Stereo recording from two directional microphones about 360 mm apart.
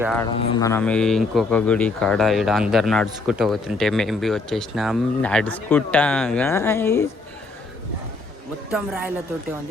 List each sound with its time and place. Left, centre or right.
0.0 s a man's voice: centre
8.7 s a man's voice: centre